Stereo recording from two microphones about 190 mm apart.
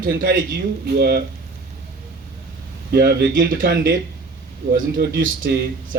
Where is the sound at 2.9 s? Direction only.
55° right (ahead or behind).